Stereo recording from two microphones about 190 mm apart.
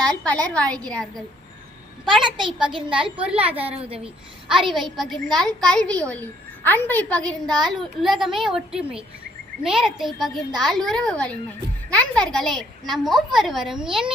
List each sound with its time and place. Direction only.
0.1 s a woman's voice: 5° left (ahead or behind)
2.2 s a child's voice: 25° right (ahead or behind)
2.9 s a child's voice: 5° right (ahead or behind)